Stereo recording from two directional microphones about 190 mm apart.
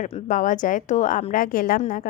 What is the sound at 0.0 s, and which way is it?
A woman's voice, 40° left (ahead or behind).